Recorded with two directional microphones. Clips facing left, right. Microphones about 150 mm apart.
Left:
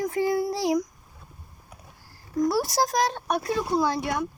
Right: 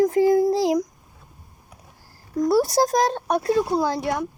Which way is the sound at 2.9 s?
30° right (ahead or behind).